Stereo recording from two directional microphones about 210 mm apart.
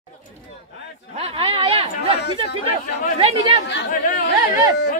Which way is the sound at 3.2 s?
30° right (ahead or behind).